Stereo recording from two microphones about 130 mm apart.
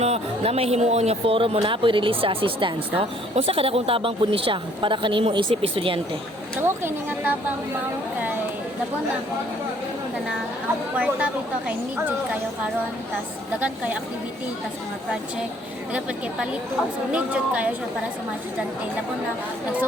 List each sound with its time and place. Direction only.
0.0 s speech: 55° right (ahead or behind)
6.6 s a woman's voice: 15° right (ahead or behind)
10.9 s a woman's voice: 10° right (ahead or behind)
13.6 s a woman's voice: 10° right (ahead or behind)
15.9 s a woman's voice: 10° right (ahead or behind)